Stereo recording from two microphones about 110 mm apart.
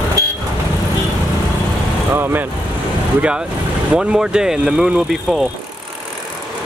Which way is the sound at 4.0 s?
5° right (ahead or behind).